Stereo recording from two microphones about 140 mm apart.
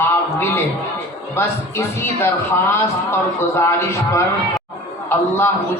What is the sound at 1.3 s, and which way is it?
A man's voice, 15° left (ahead or behind).